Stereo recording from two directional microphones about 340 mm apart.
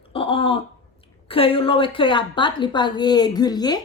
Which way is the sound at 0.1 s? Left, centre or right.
Centre.